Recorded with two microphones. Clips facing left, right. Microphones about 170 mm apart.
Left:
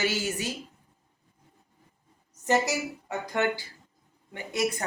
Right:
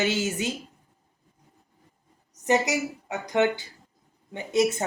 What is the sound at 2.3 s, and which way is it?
A woman's voice, 20° right (ahead or behind).